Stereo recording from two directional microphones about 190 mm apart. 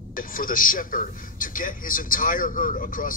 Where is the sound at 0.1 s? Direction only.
45° left (ahead or behind).